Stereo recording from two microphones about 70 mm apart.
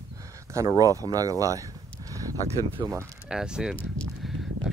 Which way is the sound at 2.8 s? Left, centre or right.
Right.